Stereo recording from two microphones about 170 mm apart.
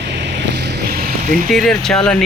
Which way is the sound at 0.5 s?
85° right.